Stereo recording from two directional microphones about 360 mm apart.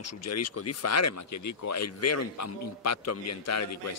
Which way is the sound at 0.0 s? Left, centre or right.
Left.